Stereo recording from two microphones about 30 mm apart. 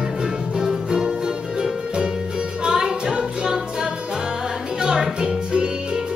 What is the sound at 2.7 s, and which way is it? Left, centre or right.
Music, centre.